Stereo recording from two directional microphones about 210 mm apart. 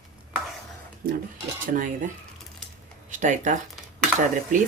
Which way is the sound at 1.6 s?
40° right (ahead or behind).